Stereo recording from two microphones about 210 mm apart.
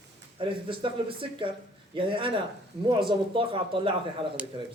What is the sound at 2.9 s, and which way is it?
Speech, 25° right (ahead or behind).